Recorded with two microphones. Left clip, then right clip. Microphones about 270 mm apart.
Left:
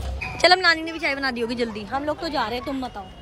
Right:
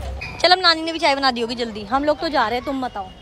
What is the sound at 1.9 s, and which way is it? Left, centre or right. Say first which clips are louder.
Speech: right 7 dB; right.